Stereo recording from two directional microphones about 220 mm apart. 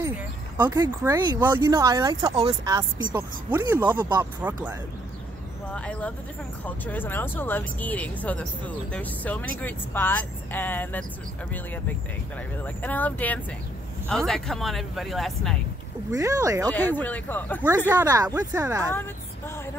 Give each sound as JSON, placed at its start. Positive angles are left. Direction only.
{"t": 0.6, "sound": "speech", "side_deg": -15}
{"t": 3.2, "sound": "speech", "side_deg": -10}
{"t": 5.7, "sound": "speech", "side_deg": 5}
{"t": 12.6, "sound": "speech", "side_deg": 5}
{"t": 16.1, "sound": "speech", "side_deg": -15}
{"t": 16.7, "sound": "speech", "side_deg": 10}
{"t": 17.6, "sound": "speech", "side_deg": -10}